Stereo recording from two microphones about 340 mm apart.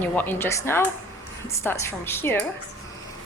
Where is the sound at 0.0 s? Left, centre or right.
Centre.